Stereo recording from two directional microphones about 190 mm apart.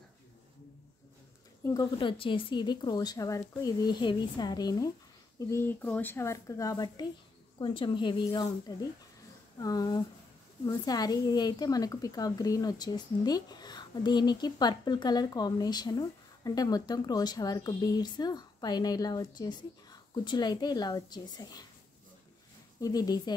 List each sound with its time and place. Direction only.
1.6 s a woman's voice: 20° left (ahead or behind)
22.8 s a woman's voice: 20° left (ahead or behind)